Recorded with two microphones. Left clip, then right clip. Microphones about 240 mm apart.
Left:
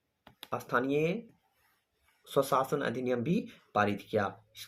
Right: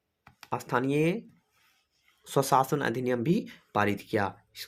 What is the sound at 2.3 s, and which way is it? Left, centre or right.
Speech, right.